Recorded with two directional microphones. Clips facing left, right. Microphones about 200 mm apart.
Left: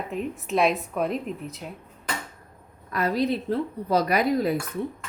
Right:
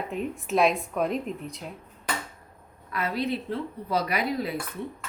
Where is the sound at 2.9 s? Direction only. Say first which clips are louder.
Left 4 dB; 40° left (ahead or behind).